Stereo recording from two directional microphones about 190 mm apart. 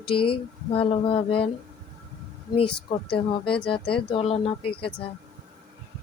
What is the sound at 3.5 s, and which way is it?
Speech, 25° left (ahead or behind).